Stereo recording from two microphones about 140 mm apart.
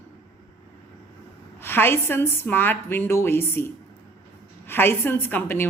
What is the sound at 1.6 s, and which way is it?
A woman's voice, 15° left (ahead or behind).